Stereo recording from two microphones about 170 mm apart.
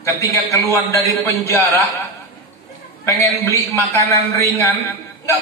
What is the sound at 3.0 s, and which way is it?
A man's voice, 20° left (ahead or behind).